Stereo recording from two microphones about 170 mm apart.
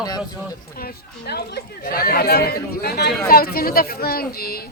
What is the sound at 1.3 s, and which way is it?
Speech, 70° left (ahead or behind).